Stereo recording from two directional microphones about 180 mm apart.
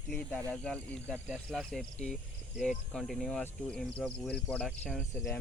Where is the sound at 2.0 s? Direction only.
5° left (ahead or behind).